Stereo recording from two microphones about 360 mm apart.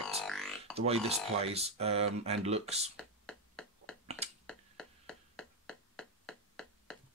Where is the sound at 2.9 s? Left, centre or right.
Centre.